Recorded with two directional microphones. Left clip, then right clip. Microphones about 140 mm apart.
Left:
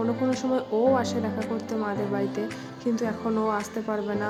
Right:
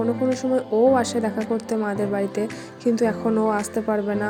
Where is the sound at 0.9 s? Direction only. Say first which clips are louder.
Right 5 dB; 30° right (ahead or behind).